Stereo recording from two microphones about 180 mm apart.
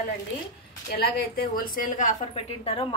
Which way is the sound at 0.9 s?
60° left (ahead or behind).